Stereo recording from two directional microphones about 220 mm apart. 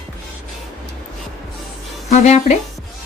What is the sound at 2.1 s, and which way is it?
Speech, 30° left (ahead or behind).